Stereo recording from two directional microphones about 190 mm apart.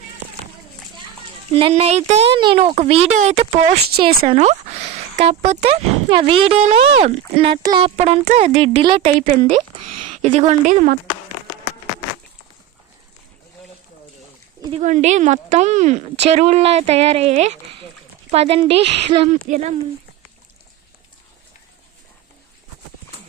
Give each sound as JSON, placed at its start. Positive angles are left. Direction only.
{"t": 1.5, "sound": "speech", "side_deg": -30}
{"t": 7.9, "sound": "speech", "side_deg": -35}
{"t": 14.8, "sound": "speech", "side_deg": -40}